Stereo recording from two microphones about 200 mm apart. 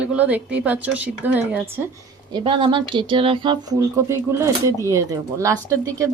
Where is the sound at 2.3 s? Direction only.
25° right (ahead or behind).